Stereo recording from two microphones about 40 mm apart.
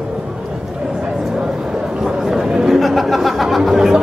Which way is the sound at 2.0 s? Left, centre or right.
Centre.